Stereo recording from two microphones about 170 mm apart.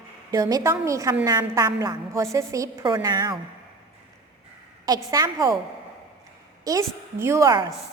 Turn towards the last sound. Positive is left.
turn(degrees=-20)  # may be behind; listen again after turning